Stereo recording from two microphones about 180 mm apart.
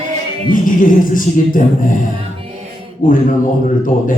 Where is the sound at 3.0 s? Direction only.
50° left (ahead or behind).